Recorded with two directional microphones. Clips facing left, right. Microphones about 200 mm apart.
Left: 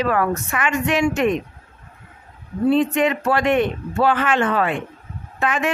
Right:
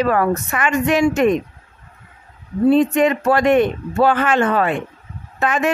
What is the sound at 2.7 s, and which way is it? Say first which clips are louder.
Speech: right 3 dB; 40° right (ahead or behind).